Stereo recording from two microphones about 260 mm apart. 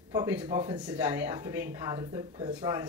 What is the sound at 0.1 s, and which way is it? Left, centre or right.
Speech, centre.